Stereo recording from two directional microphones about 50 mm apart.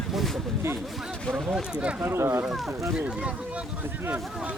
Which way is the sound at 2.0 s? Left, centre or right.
Right.